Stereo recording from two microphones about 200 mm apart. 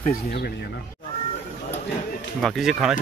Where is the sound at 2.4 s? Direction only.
Centre (ahead or behind).